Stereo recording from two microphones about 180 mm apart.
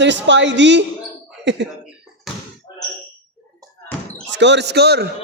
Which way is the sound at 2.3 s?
Centre (ahead or behind).